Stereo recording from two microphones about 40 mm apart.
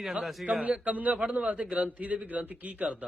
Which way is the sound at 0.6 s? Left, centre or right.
Right.